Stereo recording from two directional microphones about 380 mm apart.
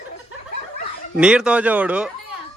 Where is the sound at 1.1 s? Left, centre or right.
Centre.